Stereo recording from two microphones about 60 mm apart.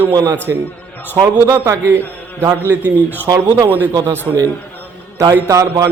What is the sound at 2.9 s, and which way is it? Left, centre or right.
Speech, left.